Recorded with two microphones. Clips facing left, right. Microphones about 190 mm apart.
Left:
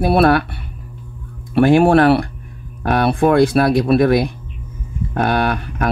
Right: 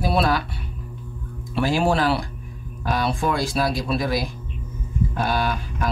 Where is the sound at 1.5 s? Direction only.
60° left (ahead or behind).